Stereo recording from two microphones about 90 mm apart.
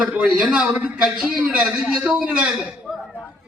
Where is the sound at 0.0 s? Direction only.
15° right (ahead or behind).